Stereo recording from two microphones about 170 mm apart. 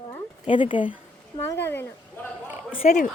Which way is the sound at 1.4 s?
15° left (ahead or behind).